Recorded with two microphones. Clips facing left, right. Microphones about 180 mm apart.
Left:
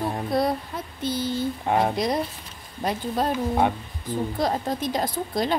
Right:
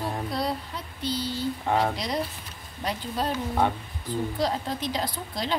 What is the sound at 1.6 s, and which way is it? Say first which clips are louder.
Speech: left 2 dB; 15° left (ahead or behind).